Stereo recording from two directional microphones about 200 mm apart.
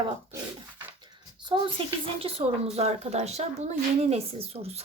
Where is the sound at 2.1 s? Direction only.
30° right (ahead or behind).